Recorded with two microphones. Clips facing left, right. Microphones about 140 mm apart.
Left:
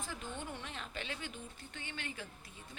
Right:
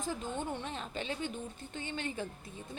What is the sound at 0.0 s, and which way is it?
A woman's voice, 45° right (ahead or behind).